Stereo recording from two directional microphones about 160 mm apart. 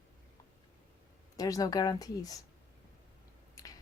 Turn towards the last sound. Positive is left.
turn(degrees=25)  # may be behind; listen again after turning